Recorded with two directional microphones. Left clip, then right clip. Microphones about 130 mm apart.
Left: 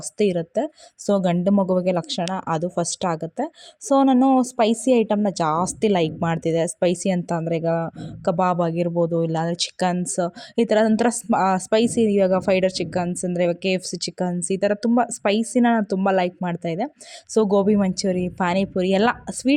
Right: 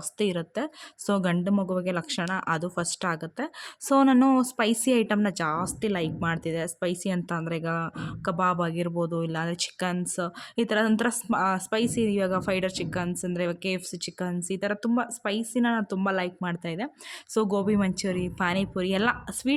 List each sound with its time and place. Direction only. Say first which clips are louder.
0.2 s a woman's voice: left 7 dB; 25° left (ahead or behind)
1.5 s a woman's voice: left 8 dB; 35° left (ahead or behind)